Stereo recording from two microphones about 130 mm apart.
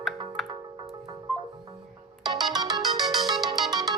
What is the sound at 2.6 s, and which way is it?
Music, 30° right (ahead or behind).